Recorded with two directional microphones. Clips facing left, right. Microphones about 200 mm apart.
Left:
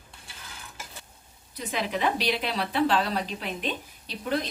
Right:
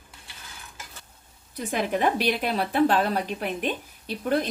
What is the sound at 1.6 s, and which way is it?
A woman's voice, 50° right (ahead or behind).